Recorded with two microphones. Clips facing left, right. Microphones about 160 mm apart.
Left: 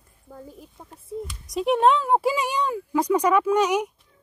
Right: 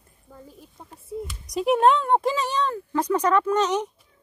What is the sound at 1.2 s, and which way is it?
Speech, centre (ahead or behind).